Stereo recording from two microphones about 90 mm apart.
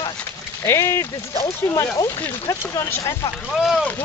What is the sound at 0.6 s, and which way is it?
Speech, 30° left (ahead or behind).